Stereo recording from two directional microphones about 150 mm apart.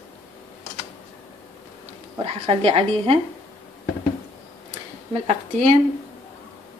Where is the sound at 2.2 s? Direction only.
40° right (ahead or behind).